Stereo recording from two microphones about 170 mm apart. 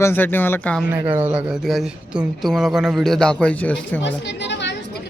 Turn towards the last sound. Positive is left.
turn(degrees=90)